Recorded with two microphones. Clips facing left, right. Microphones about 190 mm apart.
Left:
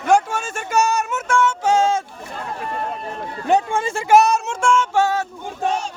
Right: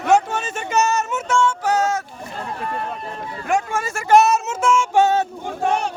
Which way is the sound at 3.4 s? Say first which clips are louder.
Left 3 dB; 30° left (ahead or behind).